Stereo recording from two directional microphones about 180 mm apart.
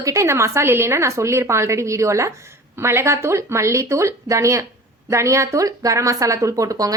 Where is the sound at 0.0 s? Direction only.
15° right (ahead or behind).